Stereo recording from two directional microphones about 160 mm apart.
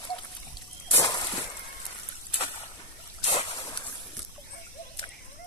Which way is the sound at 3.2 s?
40° left (ahead or behind).